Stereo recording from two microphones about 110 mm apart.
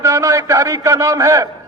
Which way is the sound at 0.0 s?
30° right (ahead or behind).